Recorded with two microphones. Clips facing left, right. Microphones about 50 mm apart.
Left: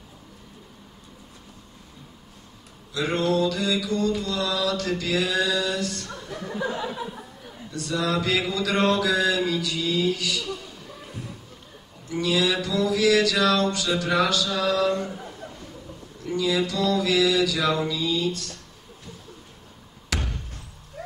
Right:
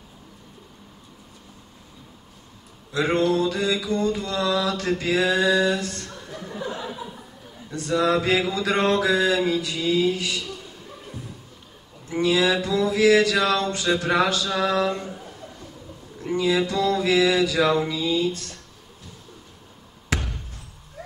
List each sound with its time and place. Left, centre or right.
2.9 s a sound: right
3.3 s mantra: right
7.7 s mantra: right
12.1 s speech: right
12.6 s mantra: right
16.3 s mantra: right
20.2 s a sound: centre